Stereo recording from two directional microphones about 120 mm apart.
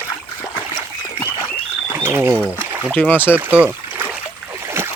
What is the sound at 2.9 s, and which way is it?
Speech, 15° left (ahead or behind).